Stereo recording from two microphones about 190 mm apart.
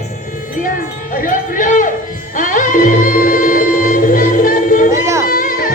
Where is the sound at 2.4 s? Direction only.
45° left (ahead or behind).